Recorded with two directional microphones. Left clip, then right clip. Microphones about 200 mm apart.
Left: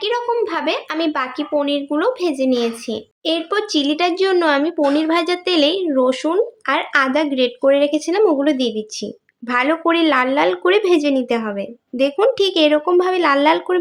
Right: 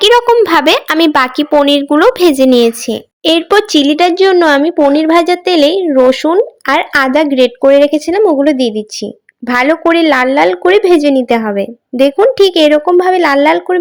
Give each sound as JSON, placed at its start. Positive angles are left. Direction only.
{"t": 0.0, "sound": "speech", "side_deg": -45}